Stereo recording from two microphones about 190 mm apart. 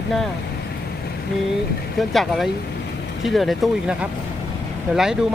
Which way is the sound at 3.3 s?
Centre (ahead or behind).